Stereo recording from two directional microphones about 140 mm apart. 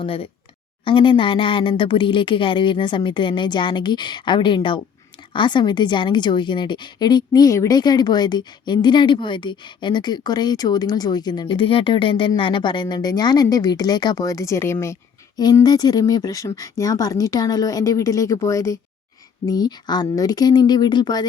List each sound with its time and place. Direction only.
0.0 s a woman's voice: 40° left (ahead or behind); by 14.9 s 20° left (ahead or behind)
15.4 s speech: 30° left (ahead or behind)